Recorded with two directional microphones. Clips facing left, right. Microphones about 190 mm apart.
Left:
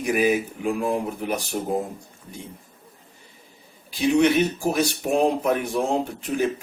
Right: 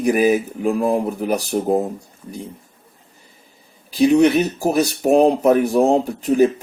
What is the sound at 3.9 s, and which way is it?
Speech, 40° right (ahead or behind).